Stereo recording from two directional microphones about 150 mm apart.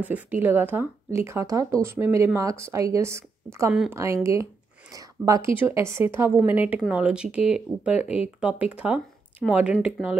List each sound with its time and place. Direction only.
0.0 s speech: 10° right (ahead or behind)